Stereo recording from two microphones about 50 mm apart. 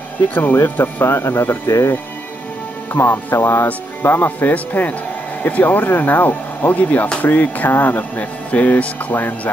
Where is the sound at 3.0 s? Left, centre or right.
Left.